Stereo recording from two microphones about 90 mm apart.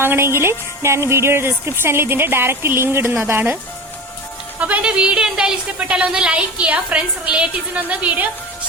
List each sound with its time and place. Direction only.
0.0 s a woman's voice: 25° right (ahead or behind)
4.6 s speech: 15° right (ahead or behind)